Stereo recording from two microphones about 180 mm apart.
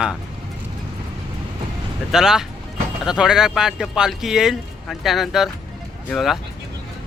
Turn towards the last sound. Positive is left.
turn(degrees=0)  # may be behind; listen again after turning